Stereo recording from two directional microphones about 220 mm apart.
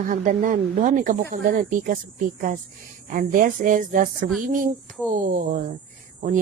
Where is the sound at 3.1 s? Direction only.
40° right (ahead or behind).